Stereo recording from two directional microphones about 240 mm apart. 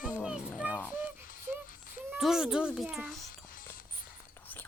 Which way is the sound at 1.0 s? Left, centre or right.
Left.